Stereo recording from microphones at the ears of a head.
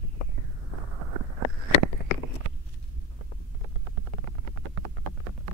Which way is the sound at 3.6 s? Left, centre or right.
Right.